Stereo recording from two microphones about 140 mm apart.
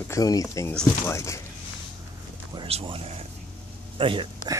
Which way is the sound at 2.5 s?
40° right (ahead or behind).